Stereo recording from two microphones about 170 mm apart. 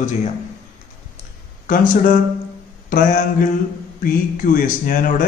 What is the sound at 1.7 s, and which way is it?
Speech, 50° left (ahead or behind).